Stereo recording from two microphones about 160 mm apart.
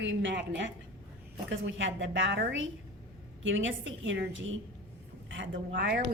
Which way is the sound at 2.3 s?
90° right.